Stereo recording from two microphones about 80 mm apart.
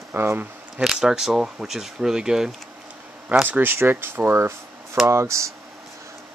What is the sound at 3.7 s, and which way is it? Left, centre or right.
Speech, right.